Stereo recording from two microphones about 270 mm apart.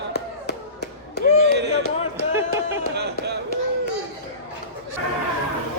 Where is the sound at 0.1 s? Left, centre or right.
Left.